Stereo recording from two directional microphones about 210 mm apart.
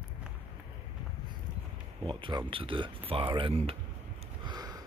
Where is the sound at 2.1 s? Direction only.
20° right (ahead or behind).